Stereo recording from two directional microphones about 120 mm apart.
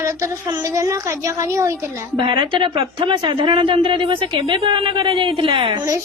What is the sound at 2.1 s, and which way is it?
A woman's voice, 45° right (ahead or behind).